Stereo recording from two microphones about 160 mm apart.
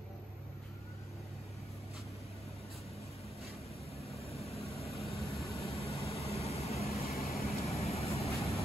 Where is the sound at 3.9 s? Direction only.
40° left (ahead or behind).